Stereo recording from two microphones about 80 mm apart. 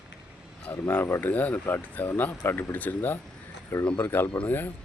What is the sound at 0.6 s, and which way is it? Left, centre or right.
Speech, left.